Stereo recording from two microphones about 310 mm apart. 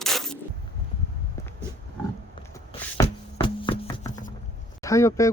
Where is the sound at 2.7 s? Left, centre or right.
Centre.